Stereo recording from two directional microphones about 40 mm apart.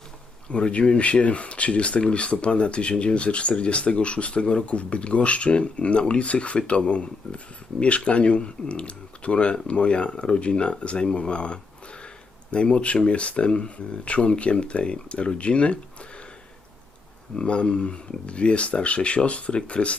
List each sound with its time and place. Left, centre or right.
0.5 s speech: left
17.3 s speech: left